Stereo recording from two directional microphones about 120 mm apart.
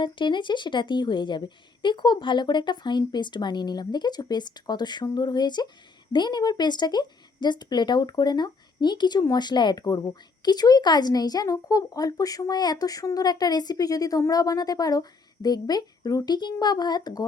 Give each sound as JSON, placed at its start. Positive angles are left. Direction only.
{"t": 0.0, "sound": "speech", "side_deg": 40}